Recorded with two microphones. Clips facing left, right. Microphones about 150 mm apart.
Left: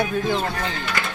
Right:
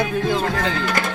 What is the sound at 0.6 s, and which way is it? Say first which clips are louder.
Speech: right 5 dB; 90° right.